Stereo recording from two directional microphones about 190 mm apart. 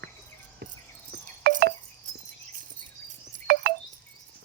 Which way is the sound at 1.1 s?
60° right (ahead or behind).